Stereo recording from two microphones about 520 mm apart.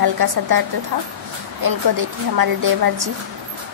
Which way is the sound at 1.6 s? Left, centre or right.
Right.